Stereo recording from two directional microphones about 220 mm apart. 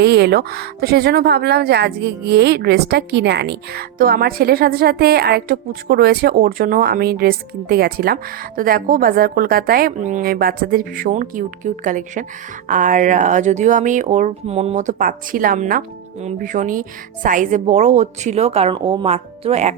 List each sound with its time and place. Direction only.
0.0 s speech: 50° right (ahead or behind); by 19.7 s 30° right (ahead or behind)